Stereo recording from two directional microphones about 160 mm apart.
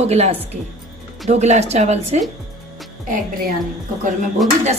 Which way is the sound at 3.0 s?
55° right (ahead or behind).